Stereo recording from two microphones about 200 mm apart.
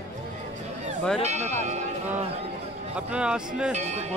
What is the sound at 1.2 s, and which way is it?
Speech, 35° right (ahead or behind).